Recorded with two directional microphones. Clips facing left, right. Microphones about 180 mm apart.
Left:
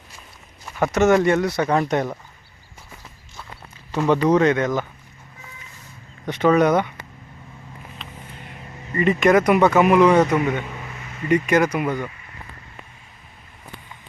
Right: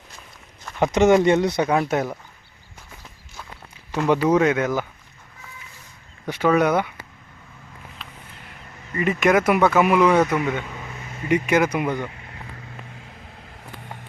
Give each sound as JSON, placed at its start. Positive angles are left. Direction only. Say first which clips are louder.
{"t": 0.8, "sound": "speech", "louder": "right 1 dB", "side_deg": -15}
{"t": 1.7, "sound": "speech", "louder": "left 1 dB", "side_deg": -5}
{"t": 3.9, "sound": "speech", "louder": "left 1 dB", "side_deg": -10}
{"t": 6.2, "sound": "speech", "louder": "left 2 dB", "side_deg": -5}
{"t": 9.0, "sound": "speech", "louder": "left 2 dB", "side_deg": -5}
{"t": 10.1, "sound": "speech", "louder": "left 2 dB", "side_deg": 15}
{"t": 11.3, "sound": "speech", "louder": "left 1 dB", "side_deg": -10}